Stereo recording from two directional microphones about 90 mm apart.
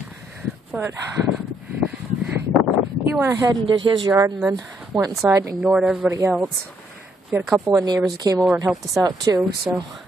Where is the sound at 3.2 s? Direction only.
35° right (ahead or behind).